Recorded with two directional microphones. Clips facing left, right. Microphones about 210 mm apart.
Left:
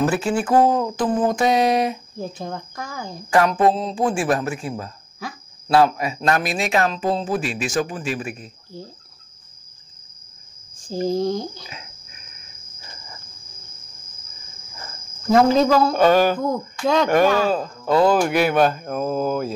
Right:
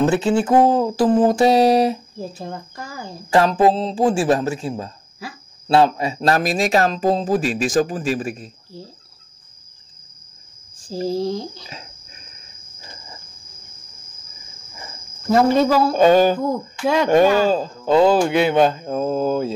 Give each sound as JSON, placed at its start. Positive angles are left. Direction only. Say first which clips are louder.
{"t": 0.0, "sound": "a man's voice", "louder": "right 3 dB", "side_deg": -25}
{"t": 2.1, "sound": "speech", "louder": "left 1 dB", "side_deg": -5}
{"t": 3.3, "sound": "a man's voice", "louder": "right 2 dB", "side_deg": -25}
{"t": 11.1, "sound": "speech", "louder": "left 1 dB", "side_deg": -5}
{"t": 11.6, "sound": "a sound", "louder": "right 1 dB", "side_deg": -30}
{"t": 14.8, "sound": "cricket", "louder": "right 1 dB", "side_deg": -5}
{"t": 16.0, "sound": "speech", "louder": "right 6 dB", "side_deg": -20}
{"t": 16.4, "sound": "speech", "louder": "right 1 dB", "side_deg": -5}
{"t": 17.5, "sound": "speech", "louder": "right 3 dB", "side_deg": -30}